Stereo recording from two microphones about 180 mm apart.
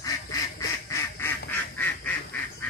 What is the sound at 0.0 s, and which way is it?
Duck, 20° left (ahead or behind).